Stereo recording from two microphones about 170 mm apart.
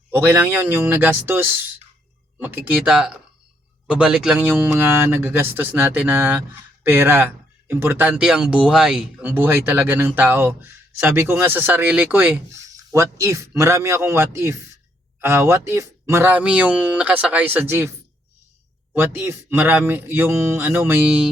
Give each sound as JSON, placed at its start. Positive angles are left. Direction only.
{"t": 0.1, "sound": "speech", "side_deg": -10}
{"t": 18.9, "sound": "speech", "side_deg": -15}